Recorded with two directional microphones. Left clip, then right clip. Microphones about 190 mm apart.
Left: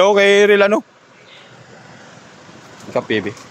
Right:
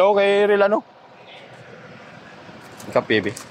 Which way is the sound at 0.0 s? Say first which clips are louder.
Left 5 dB; 45° left (ahead or behind).